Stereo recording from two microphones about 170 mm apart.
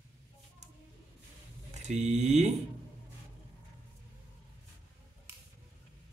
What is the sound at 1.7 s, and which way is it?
Speech, 40° right (ahead or behind).